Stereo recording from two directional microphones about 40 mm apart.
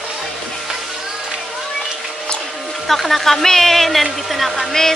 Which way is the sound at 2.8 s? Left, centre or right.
Centre.